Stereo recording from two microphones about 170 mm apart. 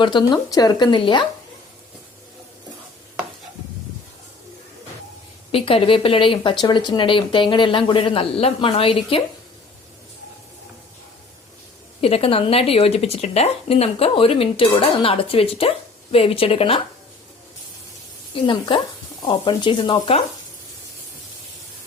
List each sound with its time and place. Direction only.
0.0 s speech: 25° left (ahead or behind)
5.5 s speech: 35° left (ahead or behind)
11.9 s speech: 35° left (ahead or behind)
18.3 s speech: 30° left (ahead or behind)